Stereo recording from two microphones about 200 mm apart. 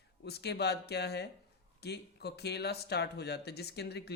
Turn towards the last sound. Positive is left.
turn(degrees=55)  # may be behind; listen again after turning